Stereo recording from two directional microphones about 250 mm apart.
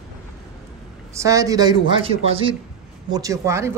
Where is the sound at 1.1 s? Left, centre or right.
Centre.